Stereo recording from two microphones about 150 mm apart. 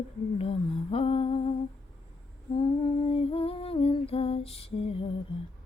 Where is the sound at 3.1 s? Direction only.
40° left (ahead or behind).